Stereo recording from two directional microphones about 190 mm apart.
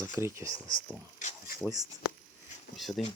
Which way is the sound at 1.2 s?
40° left (ahead or behind).